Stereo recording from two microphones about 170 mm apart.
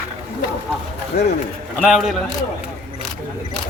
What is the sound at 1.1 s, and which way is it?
Speech, 70° left (ahead or behind).